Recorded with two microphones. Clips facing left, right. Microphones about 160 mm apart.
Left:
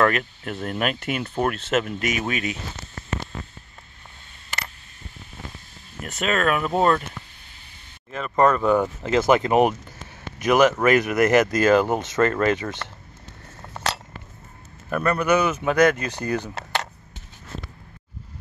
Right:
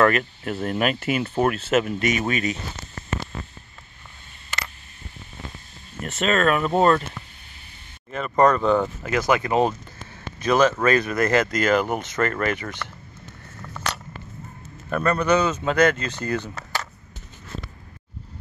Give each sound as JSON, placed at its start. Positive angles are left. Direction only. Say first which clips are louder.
{"t": 0.0, "sound": "speech", "louder": "right 2 dB", "side_deg": 0}
{"t": 5.9, "sound": "speech", "louder": "right 2 dB", "side_deg": 0}
{"t": 8.1, "sound": "speech", "louder": "right 1 dB", "side_deg": 0}
{"t": 9.0, "sound": "speech", "louder": "left 3 dB", "side_deg": 25}
{"t": 14.9, "sound": "speech", "louder": "even", "side_deg": 5}